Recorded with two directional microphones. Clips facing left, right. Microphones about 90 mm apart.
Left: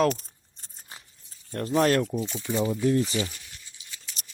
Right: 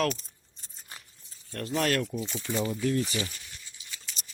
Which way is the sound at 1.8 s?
30° left (ahead or behind).